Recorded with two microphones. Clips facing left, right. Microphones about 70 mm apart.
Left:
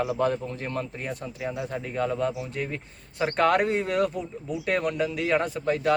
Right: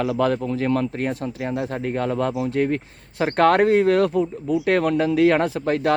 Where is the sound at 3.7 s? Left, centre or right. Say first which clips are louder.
Right 8 dB; right.